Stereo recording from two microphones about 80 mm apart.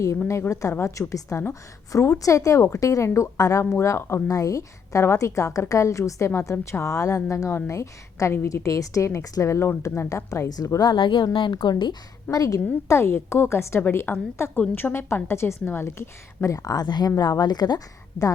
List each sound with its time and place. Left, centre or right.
0.3 s a woman's voice: left
4.3 s a woman's voice: left
10.5 s a woman's voice: left
12.4 s a woman's voice: left
16.6 s speech: left